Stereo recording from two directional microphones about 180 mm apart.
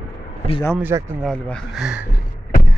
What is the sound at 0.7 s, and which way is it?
Speech, 10° right (ahead or behind).